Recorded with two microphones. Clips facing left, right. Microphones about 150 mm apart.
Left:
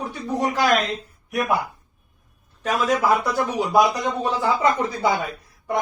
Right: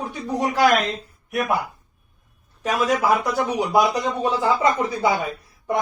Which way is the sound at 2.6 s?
10° right (ahead or behind).